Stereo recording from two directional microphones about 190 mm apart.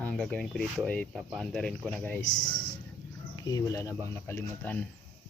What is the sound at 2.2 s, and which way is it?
Speech, 45° left (ahead or behind).